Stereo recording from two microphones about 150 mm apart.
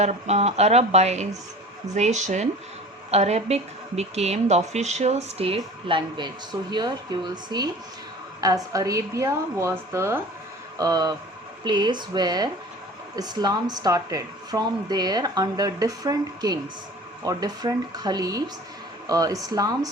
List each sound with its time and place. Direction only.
0.0 s a woman's voice: 45° right (ahead or behind); by 19.9 s 25° right (ahead or behind)